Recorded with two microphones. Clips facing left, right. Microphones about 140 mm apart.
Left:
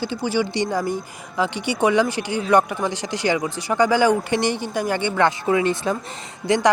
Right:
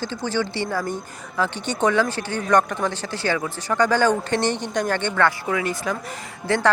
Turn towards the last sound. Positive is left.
turn(degrees=15)  # may be behind; listen again after turning